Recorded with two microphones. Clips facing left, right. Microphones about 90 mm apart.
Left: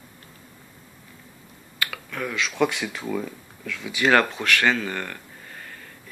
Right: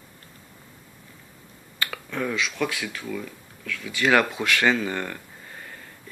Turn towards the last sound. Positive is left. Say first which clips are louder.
# right 1 dB
turn(degrees=-20)  # may be behind; listen again after turning